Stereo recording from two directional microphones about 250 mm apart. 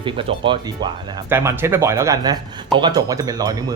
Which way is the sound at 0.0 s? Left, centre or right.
Right.